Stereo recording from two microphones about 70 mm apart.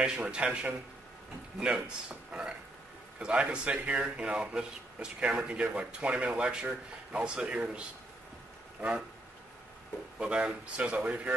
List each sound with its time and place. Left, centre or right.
0.0 s speech: centre
10.1 s speech: centre